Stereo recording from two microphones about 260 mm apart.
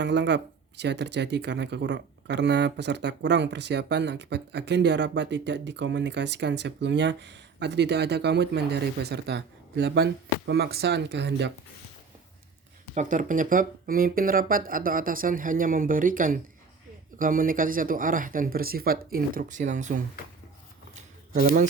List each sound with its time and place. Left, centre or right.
0.0 s speech: right
12.9 s speech: right
20.9 s a sound: right